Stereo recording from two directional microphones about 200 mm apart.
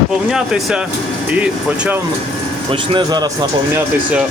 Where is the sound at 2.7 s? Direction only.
25° right (ahead or behind).